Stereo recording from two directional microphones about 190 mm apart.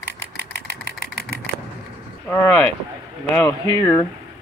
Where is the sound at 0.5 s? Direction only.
60° left (ahead or behind).